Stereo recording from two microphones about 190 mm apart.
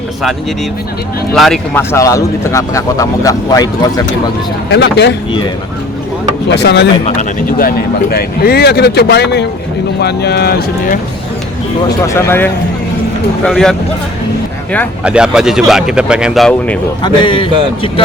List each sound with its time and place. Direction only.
1.3 s a man's voice: centre (ahead or behind)
1.7 s a man's voice: 15° left (ahead or behind)
4.7 s speech: 65° left (ahead or behind)
6.5 s speech: 65° left (ahead or behind)
7.2 s speech: 50° left (ahead or behind)
12.0 s a man's voice: 15° left (ahead or behind)
15.0 s a man's voice: 5° right (ahead or behind)
17.0 s speech: 25° left (ahead or behind)